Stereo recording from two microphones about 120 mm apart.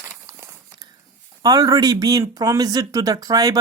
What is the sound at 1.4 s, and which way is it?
Speech, 30° right (ahead or behind).